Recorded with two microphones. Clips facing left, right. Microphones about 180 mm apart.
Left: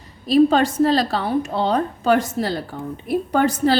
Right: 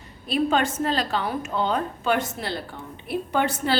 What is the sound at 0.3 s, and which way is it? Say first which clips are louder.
A woman's voice: left 8 dB; 35° left (ahead or behind).